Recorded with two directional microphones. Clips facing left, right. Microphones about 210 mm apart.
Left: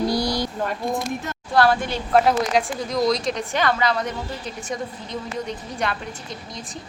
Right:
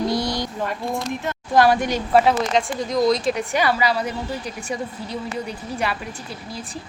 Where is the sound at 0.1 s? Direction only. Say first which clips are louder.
Even; 25° right (ahead or behind).